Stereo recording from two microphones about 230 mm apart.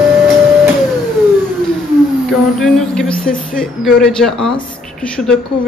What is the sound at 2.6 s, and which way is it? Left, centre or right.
Speech, centre.